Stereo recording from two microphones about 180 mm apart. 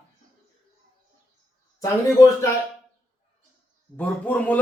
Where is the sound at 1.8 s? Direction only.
20° left (ahead or behind).